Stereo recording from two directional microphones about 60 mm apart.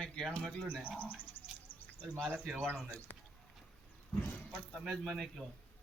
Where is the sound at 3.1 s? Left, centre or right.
Left.